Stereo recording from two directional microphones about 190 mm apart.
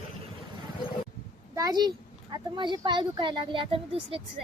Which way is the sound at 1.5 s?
20° right (ahead or behind).